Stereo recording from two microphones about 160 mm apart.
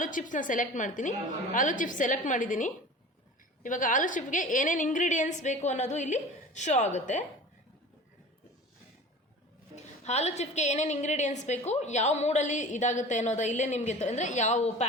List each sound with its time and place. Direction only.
0.0 s a woman's voice: 55° left (ahead or behind)
9.7 s a woman's voice: 45° left (ahead or behind)